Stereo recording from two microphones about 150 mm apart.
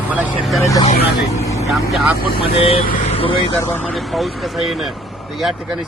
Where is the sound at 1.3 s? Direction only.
20° left (ahead or behind).